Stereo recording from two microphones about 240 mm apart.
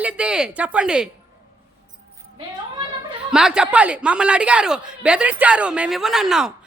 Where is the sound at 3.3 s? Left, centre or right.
Centre.